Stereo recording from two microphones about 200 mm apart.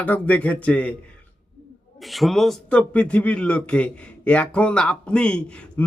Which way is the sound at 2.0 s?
Centre (ahead or behind).